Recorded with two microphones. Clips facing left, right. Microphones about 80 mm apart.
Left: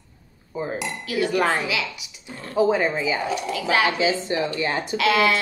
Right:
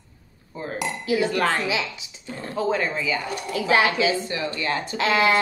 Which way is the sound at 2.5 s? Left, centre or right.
Centre.